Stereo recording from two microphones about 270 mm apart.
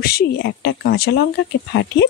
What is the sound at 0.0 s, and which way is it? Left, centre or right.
Speech, left.